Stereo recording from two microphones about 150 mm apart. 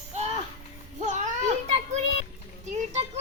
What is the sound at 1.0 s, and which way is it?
Children playing, 55° right (ahead or behind).